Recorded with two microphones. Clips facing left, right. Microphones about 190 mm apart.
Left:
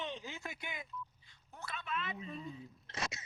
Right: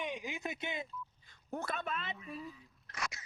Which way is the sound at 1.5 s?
50° right (ahead or behind).